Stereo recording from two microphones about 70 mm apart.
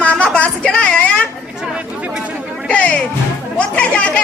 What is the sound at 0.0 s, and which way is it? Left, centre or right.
Music, centre.